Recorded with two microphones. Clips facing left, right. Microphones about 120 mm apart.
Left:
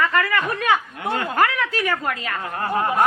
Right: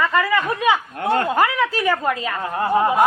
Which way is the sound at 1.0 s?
50° right (ahead or behind).